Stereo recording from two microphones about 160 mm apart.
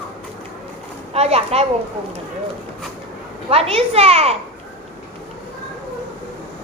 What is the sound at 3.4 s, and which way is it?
Speech, 35° right (ahead or behind).